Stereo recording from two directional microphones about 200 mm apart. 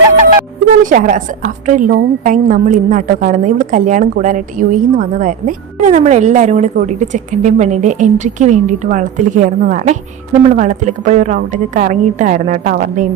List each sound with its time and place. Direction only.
0.8 s a woman's voice: 40° right (ahead or behind)